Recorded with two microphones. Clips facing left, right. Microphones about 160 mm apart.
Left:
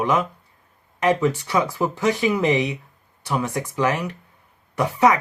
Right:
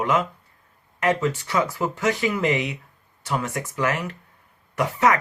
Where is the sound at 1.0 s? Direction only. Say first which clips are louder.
Left 3 dB; 15° left (ahead or behind).